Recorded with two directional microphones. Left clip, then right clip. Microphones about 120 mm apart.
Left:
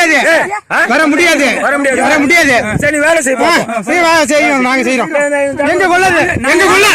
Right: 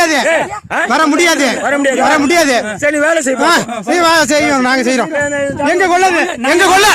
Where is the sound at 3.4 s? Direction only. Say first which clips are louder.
Left 1 dB; 30° right (ahead or behind).